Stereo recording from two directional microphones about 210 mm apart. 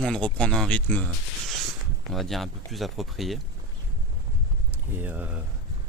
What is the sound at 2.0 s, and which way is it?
Speech, centre (ahead or behind).